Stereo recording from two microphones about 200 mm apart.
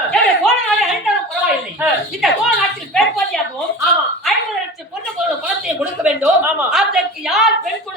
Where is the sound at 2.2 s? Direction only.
Centre (ahead or behind).